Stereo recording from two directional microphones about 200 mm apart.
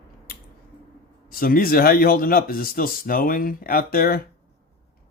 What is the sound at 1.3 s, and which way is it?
Speech, 45° left (ahead or behind).